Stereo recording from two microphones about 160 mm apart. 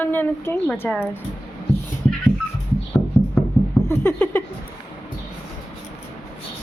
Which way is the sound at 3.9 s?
15° left (ahead or behind).